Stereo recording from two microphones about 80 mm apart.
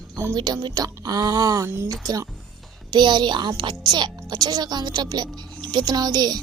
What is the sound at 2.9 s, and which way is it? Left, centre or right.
Speech, right.